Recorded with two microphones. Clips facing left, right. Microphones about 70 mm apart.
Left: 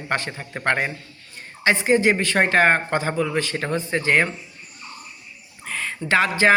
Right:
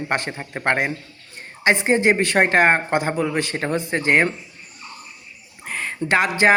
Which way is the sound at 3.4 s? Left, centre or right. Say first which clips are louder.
Right 1 dB; right.